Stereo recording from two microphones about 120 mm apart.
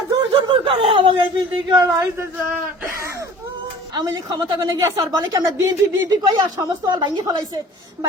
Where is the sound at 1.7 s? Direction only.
35° right (ahead or behind).